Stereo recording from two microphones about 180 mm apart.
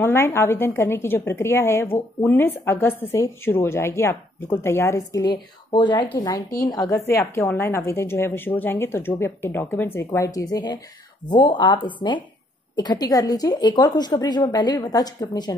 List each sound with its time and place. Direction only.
0.0 s speech: 15° left (ahead or behind)